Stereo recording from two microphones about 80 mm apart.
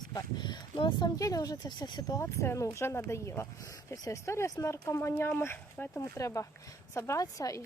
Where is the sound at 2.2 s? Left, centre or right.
Left.